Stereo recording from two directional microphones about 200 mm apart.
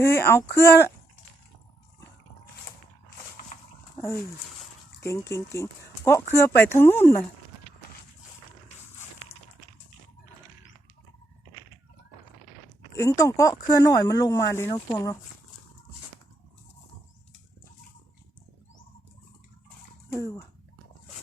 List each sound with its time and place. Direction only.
0.0 s speech: 10° left (ahead or behind)
3.9 s speech: 15° left (ahead or behind)
4.9 s a sound: 15° left (ahead or behind)
5.3 s speech: 15° left (ahead or behind)
13.0 s speech: 15° left (ahead or behind)
20.1 s speech: 15° left (ahead or behind)